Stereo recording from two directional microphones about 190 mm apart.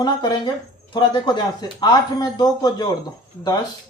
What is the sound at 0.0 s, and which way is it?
Speech, 20° left (ahead or behind).